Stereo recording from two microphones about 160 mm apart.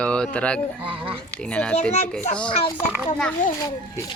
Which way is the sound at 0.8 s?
35° right (ahead or behind).